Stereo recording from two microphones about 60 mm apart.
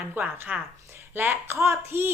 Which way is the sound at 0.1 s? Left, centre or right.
Right.